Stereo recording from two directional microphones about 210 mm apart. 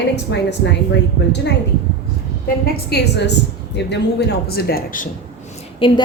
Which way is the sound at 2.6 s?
50° left (ahead or behind).